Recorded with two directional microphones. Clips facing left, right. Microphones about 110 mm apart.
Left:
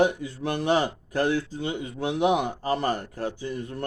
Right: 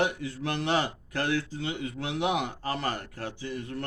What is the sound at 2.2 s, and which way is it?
Speech, 20° left (ahead or behind).